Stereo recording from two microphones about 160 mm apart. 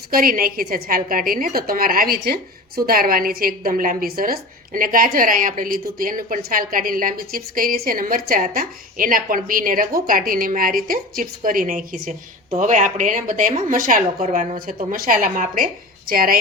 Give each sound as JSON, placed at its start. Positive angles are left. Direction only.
{"t": 0.1, "sound": "a woman's voice", "side_deg": -65}
{"t": 14.8, "sound": "a woman's voice", "side_deg": -60}